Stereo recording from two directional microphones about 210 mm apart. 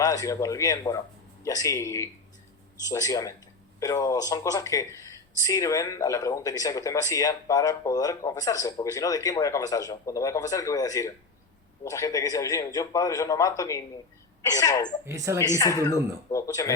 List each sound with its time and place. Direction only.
0.0 s speech: 15° left (ahead or behind)
15.0 s speech: 15° right (ahead or behind)
15.4 s speech: 15° left (ahead or behind)